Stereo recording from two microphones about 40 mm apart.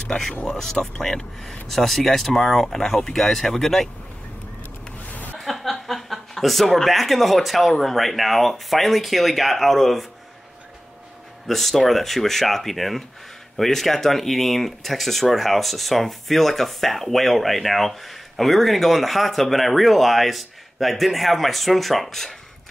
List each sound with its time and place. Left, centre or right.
0.5 s speech: centre
5.0 s a sound: left
5.4 s speech: centre
11.4 s speech: centre